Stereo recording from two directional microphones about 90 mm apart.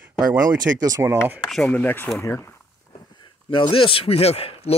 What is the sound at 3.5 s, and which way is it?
Speech, 75° left (ahead or behind).